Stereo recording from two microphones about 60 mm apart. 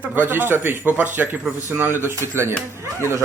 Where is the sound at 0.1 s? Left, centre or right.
Right.